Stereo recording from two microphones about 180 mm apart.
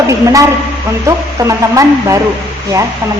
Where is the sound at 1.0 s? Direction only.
15° right (ahead or behind).